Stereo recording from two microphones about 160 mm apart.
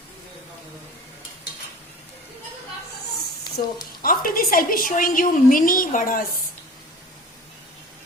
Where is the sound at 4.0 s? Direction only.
65° left (ahead or behind).